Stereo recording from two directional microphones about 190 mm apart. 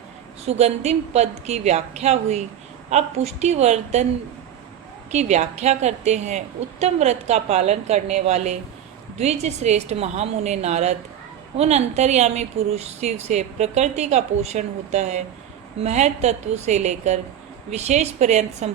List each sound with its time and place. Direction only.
0.4 s speech: 35° right (ahead or behind)
5.1 s speech: 35° right (ahead or behind)